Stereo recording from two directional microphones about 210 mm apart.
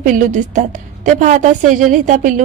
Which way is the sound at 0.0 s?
40° right (ahead or behind).